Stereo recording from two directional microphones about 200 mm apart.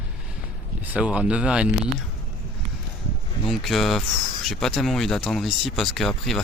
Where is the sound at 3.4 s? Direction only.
Centre (ahead or behind).